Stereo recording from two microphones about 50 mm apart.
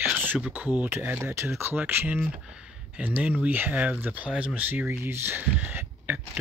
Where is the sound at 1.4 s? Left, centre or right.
Right.